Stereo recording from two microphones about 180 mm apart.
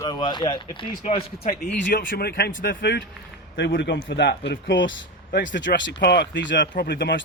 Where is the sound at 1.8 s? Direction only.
50° left (ahead or behind).